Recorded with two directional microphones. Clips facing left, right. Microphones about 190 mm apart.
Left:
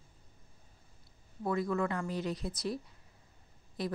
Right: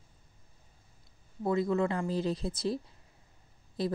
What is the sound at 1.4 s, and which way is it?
Speech, 25° right (ahead or behind).